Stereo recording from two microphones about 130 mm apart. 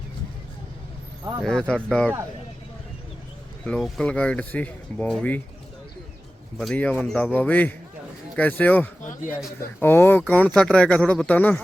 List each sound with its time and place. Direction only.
1.5 s speech: 5° left (ahead or behind)
3.6 s speech: 5° left (ahead or behind)
6.6 s speech: 10° left (ahead or behind)